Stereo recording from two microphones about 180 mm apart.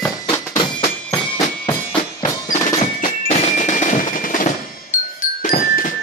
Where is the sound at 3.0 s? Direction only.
40° left (ahead or behind).